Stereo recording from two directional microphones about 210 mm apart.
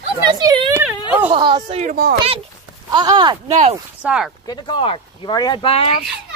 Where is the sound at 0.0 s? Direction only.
20° right (ahead or behind); by 2.1 s 40° right (ahead or behind).